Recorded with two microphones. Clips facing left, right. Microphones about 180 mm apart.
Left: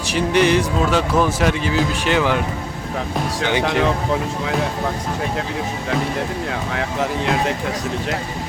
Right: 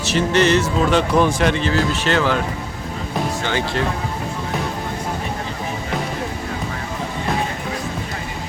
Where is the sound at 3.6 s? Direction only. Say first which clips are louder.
Left 4 dB; 75° left (ahead or behind).